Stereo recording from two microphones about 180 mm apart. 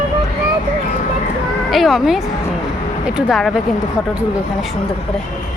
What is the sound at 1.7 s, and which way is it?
Speech, centre (ahead or behind).